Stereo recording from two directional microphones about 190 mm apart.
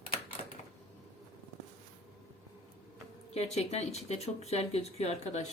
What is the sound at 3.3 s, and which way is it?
Speech, 35° left (ahead or behind).